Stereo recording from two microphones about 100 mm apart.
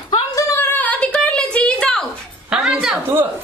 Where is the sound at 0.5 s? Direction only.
20° left (ahead or behind).